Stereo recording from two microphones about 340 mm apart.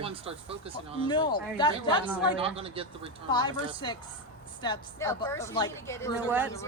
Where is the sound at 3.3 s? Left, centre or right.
Centre.